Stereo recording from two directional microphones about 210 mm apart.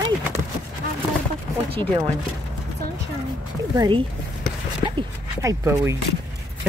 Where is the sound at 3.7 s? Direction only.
20° right (ahead or behind).